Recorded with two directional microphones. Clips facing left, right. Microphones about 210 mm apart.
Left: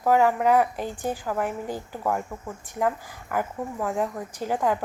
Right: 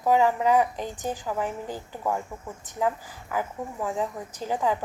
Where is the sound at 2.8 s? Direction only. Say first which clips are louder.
Left 1 dB; 10° right (ahead or behind).